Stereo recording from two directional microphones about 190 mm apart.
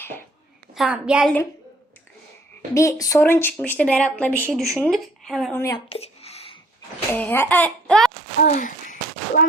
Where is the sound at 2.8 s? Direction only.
15° left (ahead or behind); by 5.5 s centre (ahead or behind).